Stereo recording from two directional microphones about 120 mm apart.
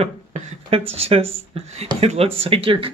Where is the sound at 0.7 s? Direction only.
55° right (ahead or behind).